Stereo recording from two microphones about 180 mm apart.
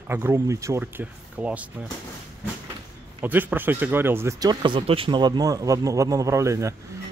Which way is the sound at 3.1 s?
10° right (ahead or behind).